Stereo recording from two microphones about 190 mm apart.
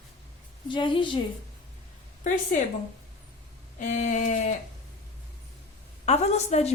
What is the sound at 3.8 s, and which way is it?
Speech, 40° left (ahead or behind).